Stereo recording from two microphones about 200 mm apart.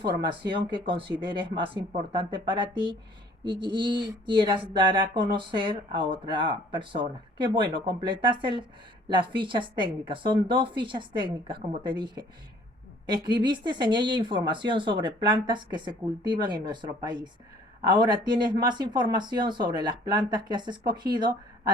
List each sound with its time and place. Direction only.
0.2 s speech: 25° right (ahead or behind)